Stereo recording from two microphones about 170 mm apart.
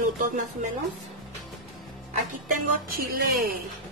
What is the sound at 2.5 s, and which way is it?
Speech, 60° right (ahead or behind).